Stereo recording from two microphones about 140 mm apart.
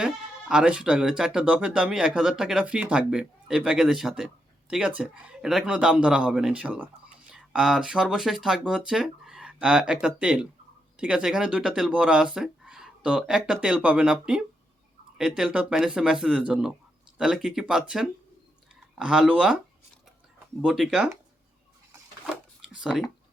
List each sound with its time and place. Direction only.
0.0 s speech: 5° right (ahead or behind)
20.6 s speech: 5° right (ahead or behind)